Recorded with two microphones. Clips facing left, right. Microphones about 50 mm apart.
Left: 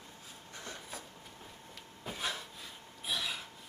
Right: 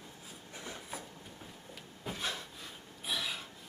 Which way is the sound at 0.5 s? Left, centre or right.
Centre.